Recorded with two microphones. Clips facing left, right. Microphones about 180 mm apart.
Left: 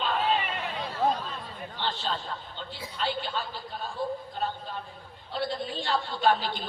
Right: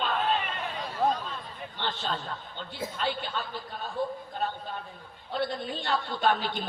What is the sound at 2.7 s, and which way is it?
Speech, 50° right (ahead or behind).